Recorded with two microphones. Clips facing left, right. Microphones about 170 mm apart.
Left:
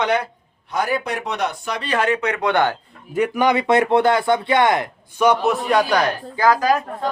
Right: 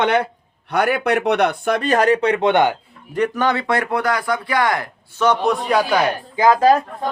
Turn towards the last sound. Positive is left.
turn(degrees=-30)  # may be behind; listen again after turning